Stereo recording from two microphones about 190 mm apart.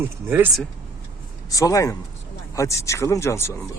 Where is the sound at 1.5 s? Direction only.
15° left (ahead or behind).